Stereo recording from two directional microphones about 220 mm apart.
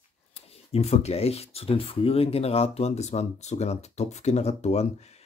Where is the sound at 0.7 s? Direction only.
30° left (ahead or behind).